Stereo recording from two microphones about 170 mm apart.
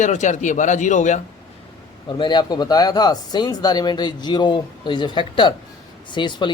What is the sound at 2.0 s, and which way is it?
Speech, 25° left (ahead or behind).